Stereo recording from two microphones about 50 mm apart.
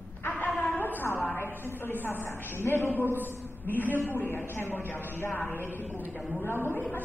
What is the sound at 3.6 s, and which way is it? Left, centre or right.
A man's voice, left.